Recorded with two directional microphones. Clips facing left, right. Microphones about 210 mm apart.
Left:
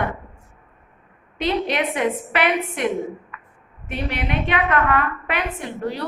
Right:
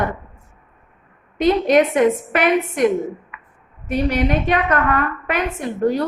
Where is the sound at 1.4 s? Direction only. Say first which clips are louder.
Right 8 dB; 45° right (ahead or behind).